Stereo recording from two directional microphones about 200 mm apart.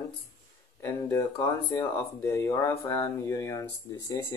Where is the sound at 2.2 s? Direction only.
10° left (ahead or behind).